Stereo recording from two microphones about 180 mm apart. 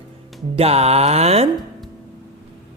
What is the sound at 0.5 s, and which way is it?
Music, 35° right (ahead or behind).